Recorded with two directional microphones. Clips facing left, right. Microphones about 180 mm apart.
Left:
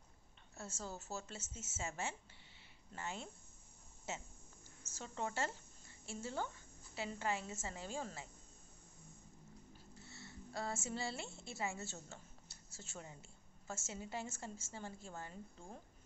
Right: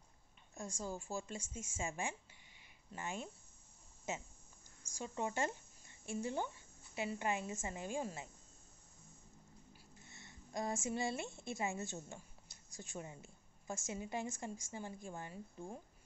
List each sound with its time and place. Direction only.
0.6 s speech: 15° right (ahead or behind)
10.0 s a woman's voice: 15° right (ahead or behind)